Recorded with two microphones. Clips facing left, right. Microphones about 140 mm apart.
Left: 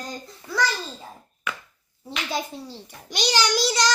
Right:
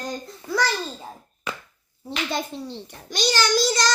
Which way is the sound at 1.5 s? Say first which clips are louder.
Even; 35° right (ahead or behind).